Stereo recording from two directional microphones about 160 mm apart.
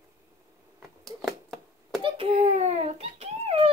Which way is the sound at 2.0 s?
35° right (ahead or behind).